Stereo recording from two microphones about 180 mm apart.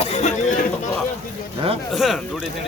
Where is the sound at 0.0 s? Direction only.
35° left (ahead or behind).